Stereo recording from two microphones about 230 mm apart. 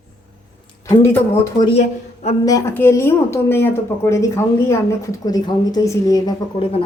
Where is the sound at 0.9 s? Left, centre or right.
Centre.